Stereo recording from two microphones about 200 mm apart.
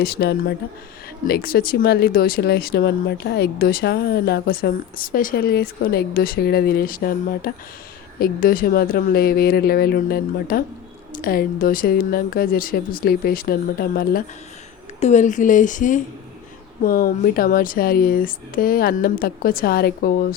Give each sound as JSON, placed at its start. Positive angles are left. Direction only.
{"t": 0.0, "sound": "speech", "side_deg": 50}